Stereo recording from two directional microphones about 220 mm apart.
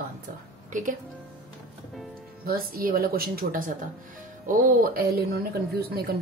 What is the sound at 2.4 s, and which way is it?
Speech, 40° right (ahead or behind).